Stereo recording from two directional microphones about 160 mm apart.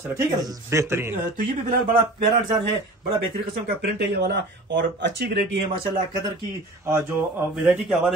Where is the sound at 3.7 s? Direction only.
90° right.